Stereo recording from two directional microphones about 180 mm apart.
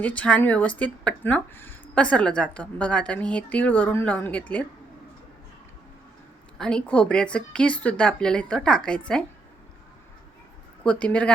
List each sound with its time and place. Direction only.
0.0 s a woman's voice: 5° left (ahead or behind)
6.6 s speech: 5° left (ahead or behind)
10.8 s a woman's voice: 5° left (ahead or behind)